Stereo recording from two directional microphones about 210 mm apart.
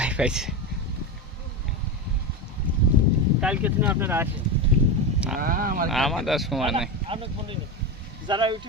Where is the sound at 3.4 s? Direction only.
5° right (ahead or behind).